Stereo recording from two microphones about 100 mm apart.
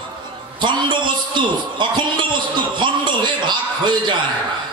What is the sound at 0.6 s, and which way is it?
A man's voice, 50° right (ahead or behind).